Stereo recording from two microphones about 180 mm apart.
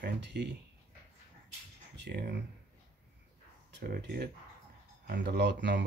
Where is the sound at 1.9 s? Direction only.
70° right (ahead or behind).